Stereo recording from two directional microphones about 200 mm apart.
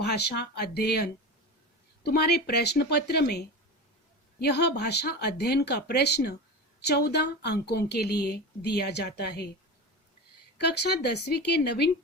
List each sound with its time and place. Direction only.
0.0 s speech: 55° left (ahead or behind)
2.0 s speech: 55° left (ahead or behind)
10.6 s speech: 55° left (ahead or behind)